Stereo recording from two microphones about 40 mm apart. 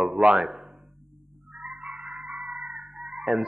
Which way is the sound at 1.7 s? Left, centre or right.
Right.